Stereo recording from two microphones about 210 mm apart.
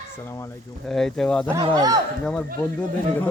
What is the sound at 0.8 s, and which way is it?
Speech, centre (ahead or behind).